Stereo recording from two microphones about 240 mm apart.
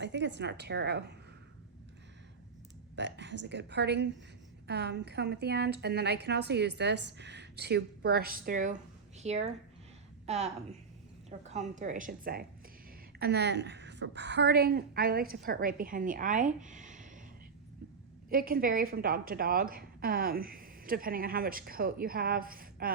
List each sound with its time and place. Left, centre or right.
0.0 s a woman's voice: right
2.9 s a woman's voice: right
18.3 s a woman's voice: right